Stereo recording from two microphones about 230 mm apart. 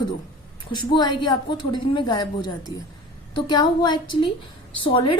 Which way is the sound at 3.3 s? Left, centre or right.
Centre.